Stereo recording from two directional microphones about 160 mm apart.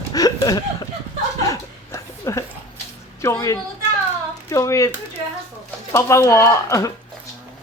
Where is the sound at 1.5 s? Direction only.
20° left (ahead or behind).